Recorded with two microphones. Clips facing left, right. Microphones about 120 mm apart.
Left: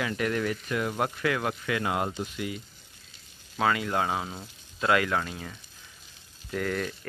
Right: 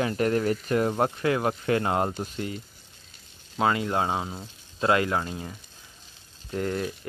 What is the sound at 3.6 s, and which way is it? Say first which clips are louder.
Speech: right 2 dB; 25° right (ahead or behind).